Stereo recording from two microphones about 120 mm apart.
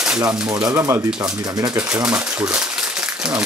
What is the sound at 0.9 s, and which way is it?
Speech, 10° right (ahead or behind).